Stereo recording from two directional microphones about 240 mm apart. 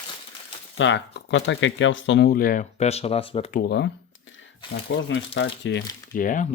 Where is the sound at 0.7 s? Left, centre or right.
Left.